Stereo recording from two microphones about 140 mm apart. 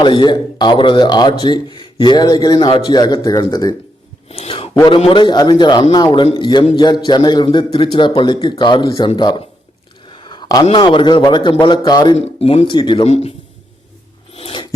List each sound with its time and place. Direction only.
0.0 s speech: 35° left (ahead or behind)
4.3 s a sound: 40° left (ahead or behind)
4.9 s a man's voice: 40° left (ahead or behind)
12.1 s speech: 45° left (ahead or behind)
13.1 s speech: 45° left (ahead or behind)
14.3 s scissors: 40° left (ahead or behind)